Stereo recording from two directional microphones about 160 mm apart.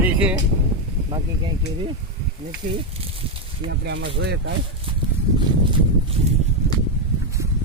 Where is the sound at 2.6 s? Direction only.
55° right (ahead or behind).